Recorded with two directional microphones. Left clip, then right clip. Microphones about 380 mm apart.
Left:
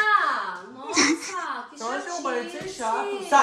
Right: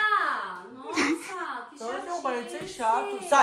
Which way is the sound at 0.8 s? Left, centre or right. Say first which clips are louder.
Left 5 dB; centre.